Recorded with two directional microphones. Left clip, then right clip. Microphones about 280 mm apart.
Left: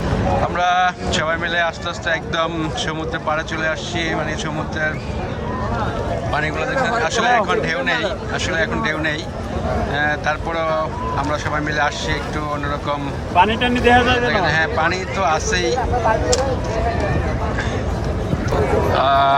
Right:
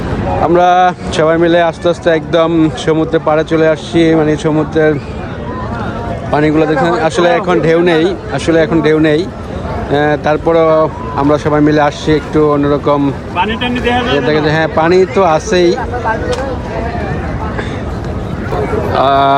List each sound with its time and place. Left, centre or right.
0.5 s speech: centre
6.3 s speech: centre
13.4 s speech: left
14.3 s speech: centre
18.9 s speech: centre